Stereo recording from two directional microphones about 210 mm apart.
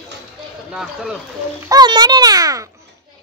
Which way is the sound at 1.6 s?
20° right (ahead or behind).